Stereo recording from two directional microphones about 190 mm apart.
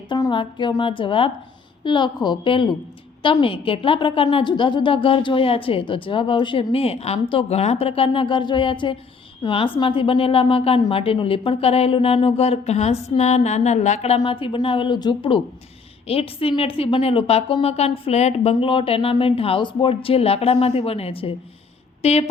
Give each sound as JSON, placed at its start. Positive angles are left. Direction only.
{"t": 0.1, "sound": "a woman's voice", "side_deg": 25}